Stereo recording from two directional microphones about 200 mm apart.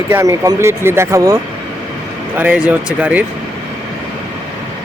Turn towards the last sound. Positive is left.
turn(degrees=-5)  # may be behind; listen again after turning